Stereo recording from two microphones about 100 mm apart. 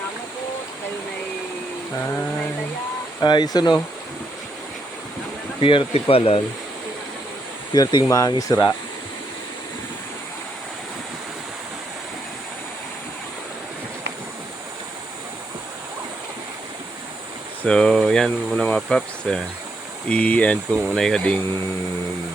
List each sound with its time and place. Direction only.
3.2 s speech: 45° left (ahead or behind)
5.5 s speech: 60° left (ahead or behind)
7.7 s speech: 45° left (ahead or behind)
17.6 s speech: 10° left (ahead or behind)